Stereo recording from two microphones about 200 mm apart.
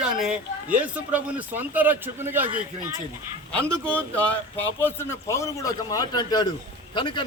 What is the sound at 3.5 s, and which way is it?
A man's voice, 5° left (ahead or behind).